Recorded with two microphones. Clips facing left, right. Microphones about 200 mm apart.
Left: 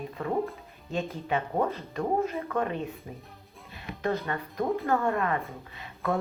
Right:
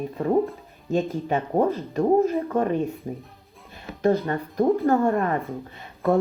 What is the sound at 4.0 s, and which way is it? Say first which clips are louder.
A woman's voice: right 8 dB; 40° right (ahead or behind).